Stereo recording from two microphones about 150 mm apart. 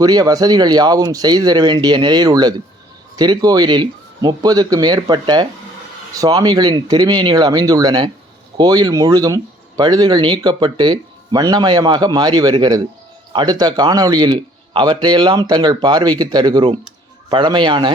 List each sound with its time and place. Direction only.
0.0 s a man's voice: 25° right (ahead or behind)